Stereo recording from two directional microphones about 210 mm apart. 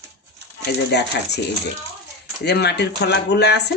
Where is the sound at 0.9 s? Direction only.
55° left (ahead or behind).